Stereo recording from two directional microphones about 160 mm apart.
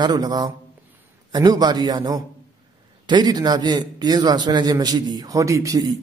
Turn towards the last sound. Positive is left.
turn(degrees=-20)  # may be behind; listen again after turning